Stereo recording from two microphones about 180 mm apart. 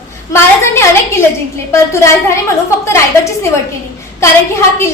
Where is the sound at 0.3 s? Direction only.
15° left (ahead or behind).